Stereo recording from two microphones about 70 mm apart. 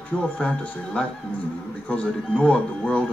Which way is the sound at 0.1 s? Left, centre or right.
Centre.